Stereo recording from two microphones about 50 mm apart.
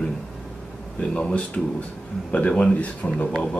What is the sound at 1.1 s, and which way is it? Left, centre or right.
Speech, left.